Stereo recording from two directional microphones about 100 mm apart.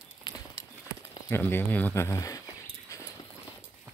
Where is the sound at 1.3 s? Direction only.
20° left (ahead or behind).